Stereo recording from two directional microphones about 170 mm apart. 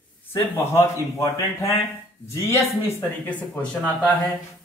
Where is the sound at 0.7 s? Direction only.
20° left (ahead or behind).